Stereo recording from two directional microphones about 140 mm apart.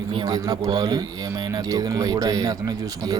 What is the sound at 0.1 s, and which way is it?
Speech, 30° right (ahead or behind).